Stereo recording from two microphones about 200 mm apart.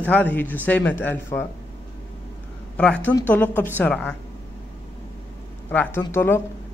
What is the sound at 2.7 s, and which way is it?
A woman's voice, 5° left (ahead or behind).